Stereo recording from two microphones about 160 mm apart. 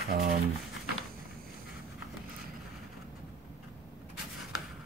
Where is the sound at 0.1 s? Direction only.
70° right (ahead or behind).